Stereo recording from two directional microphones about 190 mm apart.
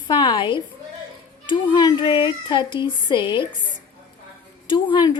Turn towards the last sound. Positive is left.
turn(degrees=25)  # may be behind; listen again after turning